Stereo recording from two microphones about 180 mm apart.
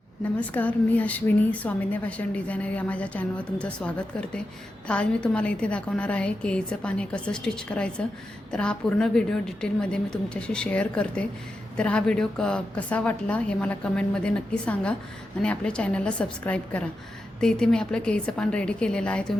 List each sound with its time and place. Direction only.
0.3 s a woman's voice: 10° left (ahead or behind)